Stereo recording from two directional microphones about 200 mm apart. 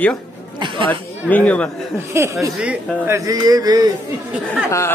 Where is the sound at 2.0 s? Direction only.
10° right (ahead or behind).